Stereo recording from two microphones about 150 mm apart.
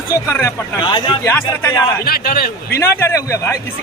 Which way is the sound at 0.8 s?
35° left (ahead or behind).